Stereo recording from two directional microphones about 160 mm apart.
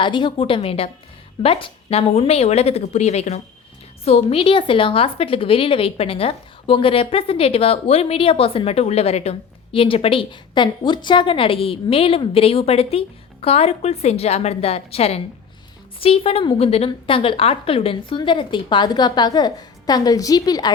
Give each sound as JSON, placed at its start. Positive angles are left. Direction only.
{"t": 0.0, "sound": "a woman's voice", "side_deg": 30}